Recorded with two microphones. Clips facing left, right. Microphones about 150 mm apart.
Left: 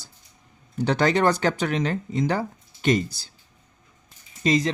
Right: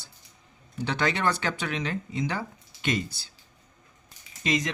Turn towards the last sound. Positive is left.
turn(degrees=35)  # may be behind; listen again after turning